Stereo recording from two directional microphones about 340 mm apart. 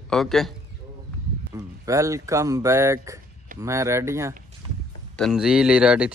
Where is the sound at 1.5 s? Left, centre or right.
Centre.